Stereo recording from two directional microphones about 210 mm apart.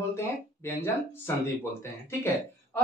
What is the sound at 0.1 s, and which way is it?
Speech, 15° left (ahead or behind).